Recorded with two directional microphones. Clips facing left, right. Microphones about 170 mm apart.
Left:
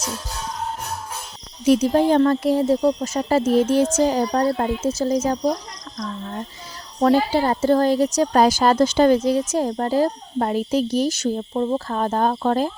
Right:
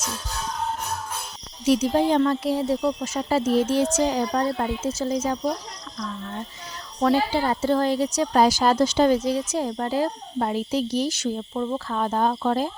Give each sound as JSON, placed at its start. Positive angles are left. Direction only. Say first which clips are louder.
{"t": 1.6, "sound": "a woman's voice", "louder": "left 4 dB", "side_deg": 50}
{"t": 7.0, "sound": "a woman's voice", "louder": "left 4 dB", "side_deg": 45}